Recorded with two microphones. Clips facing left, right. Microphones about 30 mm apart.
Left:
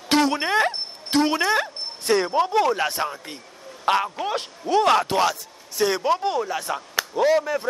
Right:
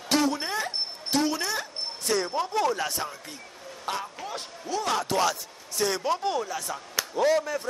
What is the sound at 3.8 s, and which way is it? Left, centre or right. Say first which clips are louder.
Speech: left 11 dB; left.